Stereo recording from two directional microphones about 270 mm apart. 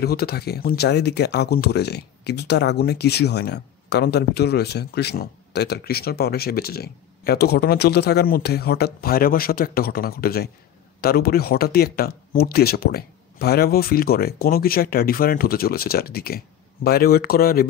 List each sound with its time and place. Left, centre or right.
0.0 s speech: left